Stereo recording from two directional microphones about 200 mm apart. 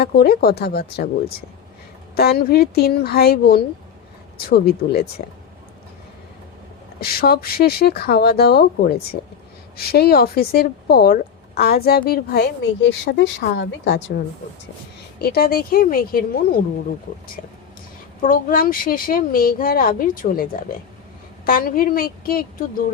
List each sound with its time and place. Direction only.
0.0 s speech: 50° left (ahead or behind)
2.1 s speech: 50° left (ahead or behind)
7.0 s speech: 50° left (ahead or behind)
15.2 s speech: 50° left (ahead or behind)